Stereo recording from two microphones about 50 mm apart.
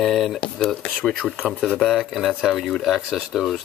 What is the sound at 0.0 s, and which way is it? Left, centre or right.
Speech, centre.